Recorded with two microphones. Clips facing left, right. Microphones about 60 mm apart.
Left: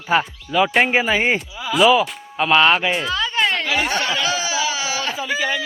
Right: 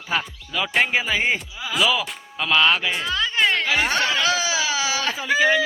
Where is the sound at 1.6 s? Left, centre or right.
Centre.